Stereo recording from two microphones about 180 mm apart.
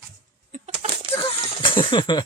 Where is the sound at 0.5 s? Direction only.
35° right (ahead or behind).